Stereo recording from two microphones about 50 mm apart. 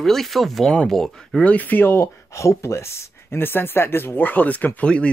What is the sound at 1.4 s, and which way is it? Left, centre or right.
Speech, left.